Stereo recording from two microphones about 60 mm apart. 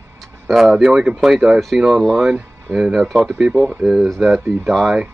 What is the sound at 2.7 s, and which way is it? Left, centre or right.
Speech, centre.